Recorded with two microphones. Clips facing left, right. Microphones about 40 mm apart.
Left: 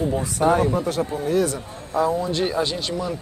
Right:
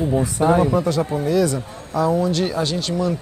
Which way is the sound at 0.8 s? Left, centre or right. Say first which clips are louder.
Right 3 dB; right.